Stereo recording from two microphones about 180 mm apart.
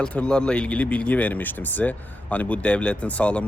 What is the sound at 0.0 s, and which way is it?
Speech, 5° left (ahead or behind).